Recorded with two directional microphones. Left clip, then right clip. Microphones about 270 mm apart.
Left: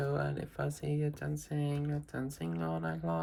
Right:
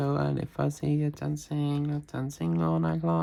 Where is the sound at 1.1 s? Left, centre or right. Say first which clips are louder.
Right 5 dB; centre.